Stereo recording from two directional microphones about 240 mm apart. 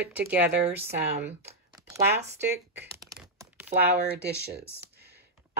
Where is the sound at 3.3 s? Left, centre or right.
Centre.